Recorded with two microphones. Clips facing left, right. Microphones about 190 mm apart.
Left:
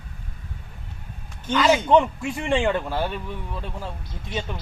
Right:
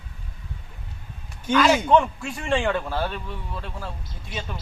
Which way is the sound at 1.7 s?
15° left (ahead or behind).